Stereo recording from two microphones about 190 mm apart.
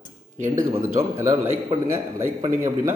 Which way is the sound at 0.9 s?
15° right (ahead or behind).